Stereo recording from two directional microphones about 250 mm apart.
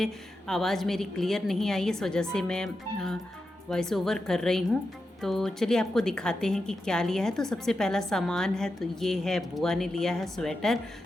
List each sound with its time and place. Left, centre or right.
0.0 s a woman's voice: centre